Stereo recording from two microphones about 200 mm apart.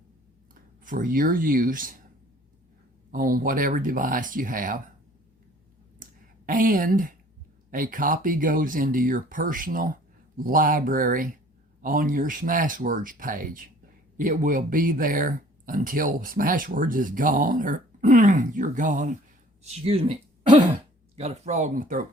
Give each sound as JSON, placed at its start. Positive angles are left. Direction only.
{"t": 0.9, "sound": "speech", "side_deg": -40}
{"t": 3.1, "sound": "speech", "side_deg": -45}
{"t": 6.0, "sound": "a sound", "side_deg": -45}
{"t": 7.7, "sound": "speech", "side_deg": -40}
{"t": 19.6, "sound": "speech", "side_deg": -30}